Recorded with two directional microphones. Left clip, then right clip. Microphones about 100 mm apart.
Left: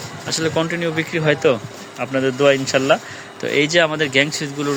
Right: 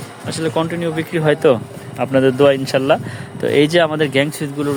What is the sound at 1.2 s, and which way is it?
Speech, 75° right (ahead or behind).